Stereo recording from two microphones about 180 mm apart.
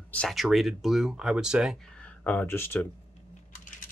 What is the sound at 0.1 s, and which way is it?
Speech, centre (ahead or behind).